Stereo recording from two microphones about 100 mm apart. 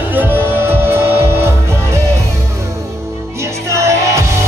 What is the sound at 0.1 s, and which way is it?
Music, 20° right (ahead or behind).